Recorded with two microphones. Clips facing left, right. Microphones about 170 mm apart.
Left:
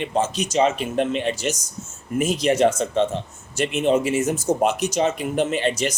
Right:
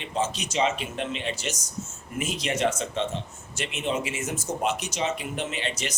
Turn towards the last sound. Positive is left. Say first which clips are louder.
# left 9 dB
turn(degrees=45)  # may be behind; listen again after turning